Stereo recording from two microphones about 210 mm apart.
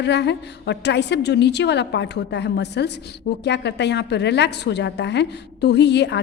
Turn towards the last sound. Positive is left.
turn(degrees=55)  # may be behind; listen again after turning